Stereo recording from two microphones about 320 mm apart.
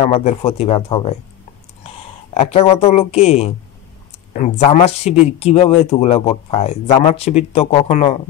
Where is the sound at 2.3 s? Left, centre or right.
Centre.